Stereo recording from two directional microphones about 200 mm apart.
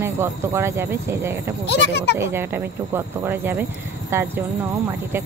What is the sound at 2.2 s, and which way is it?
Speech, 10° right (ahead or behind).